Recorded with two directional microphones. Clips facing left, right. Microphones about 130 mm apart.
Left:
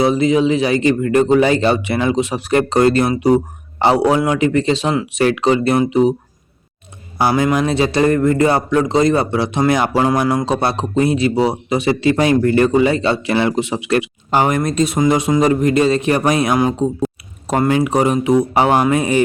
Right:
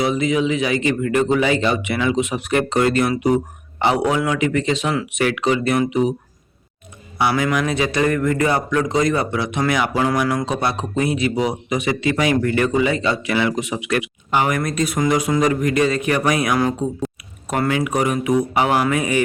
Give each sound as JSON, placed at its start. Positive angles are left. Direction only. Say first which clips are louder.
{"t": 0.0, "sound": "speech", "louder": "left 5 dB", "side_deg": 35}
{"t": 7.2, "sound": "speech", "louder": "left 4 dB", "side_deg": 35}
{"t": 17.4, "sound": "speech", "louder": "left 5 dB", "side_deg": 30}